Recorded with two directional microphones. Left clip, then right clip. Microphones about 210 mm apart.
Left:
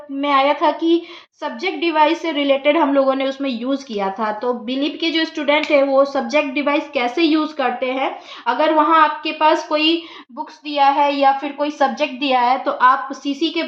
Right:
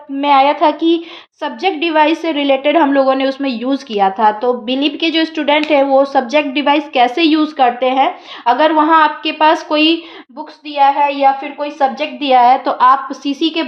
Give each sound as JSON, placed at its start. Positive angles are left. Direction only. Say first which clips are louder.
{"t": 0.2, "sound": "a woman's voice", "louder": "right 5 dB", "side_deg": -50}
{"t": 10.8, "sound": "a woman's voice", "louder": "right 3 dB", "side_deg": -30}